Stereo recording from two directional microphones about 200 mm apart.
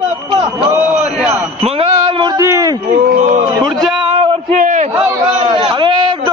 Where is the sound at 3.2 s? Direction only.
40° right (ahead or behind).